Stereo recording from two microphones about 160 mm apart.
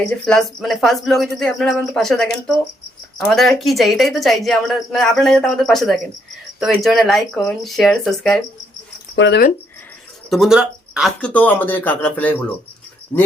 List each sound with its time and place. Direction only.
0.0 s a woman's voice: 5° left (ahead or behind)
9.1 s speech: 90° left
10.2 s speech: centre (ahead or behind)
11.2 s speech: 10° left (ahead or behind)